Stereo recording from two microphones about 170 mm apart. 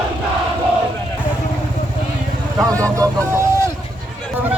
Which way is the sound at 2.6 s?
20° right (ahead or behind).